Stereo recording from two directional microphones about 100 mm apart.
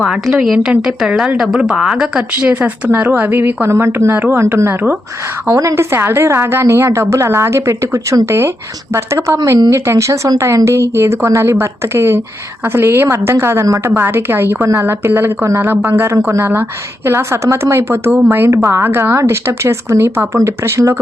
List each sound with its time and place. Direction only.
0.0 s a woman's voice: 5° right (ahead or behind); by 4.9 s 20° right (ahead or behind)
5.5 s a woman's voice: 35° right (ahead or behind)